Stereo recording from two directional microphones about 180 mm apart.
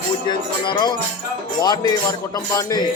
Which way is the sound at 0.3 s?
25° left (ahead or behind).